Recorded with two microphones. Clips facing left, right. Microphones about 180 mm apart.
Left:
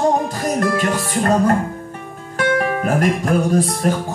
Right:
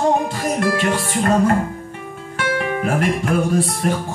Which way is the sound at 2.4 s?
40° left (ahead or behind).